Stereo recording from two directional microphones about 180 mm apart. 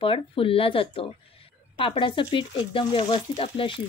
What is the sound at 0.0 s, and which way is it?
Speech, 30° left (ahead or behind).